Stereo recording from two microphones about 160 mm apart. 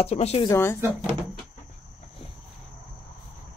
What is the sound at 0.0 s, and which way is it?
Speech, 40° left (ahead or behind).